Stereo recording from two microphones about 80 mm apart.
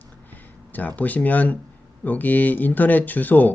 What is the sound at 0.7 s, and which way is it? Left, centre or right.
Speech, centre.